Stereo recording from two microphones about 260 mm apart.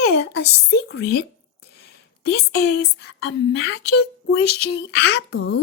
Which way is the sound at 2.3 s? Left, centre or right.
Left.